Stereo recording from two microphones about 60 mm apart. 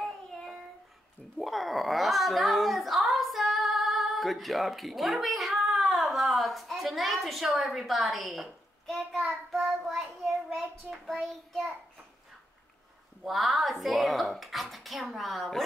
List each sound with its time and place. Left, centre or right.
1.4 s speech: centre
9.2 s child singing: centre
10.9 s child singing: centre
13.2 s speech: centre